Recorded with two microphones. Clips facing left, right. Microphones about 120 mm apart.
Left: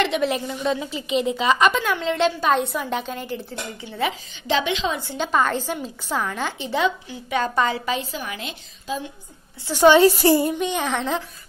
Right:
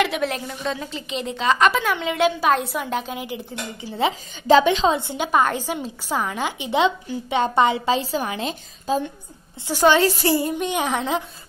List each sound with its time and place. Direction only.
0.0 s a woman's voice: centre (ahead or behind)
4.1 s a woman's voice: 40° right (ahead or behind)
5.1 s a woman's voice: 10° right (ahead or behind)
6.8 s a woman's voice: 25° right (ahead or behind); by 9.1 s 40° right (ahead or behind)
9.8 s a woman's voice: 20° left (ahead or behind)
10.6 s a woman's voice: 10° right (ahead or behind)